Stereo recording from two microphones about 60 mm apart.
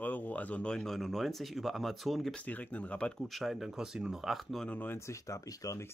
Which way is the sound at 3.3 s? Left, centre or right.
Centre.